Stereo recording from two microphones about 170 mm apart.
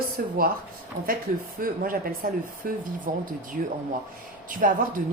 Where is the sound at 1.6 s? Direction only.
55° right (ahead or behind).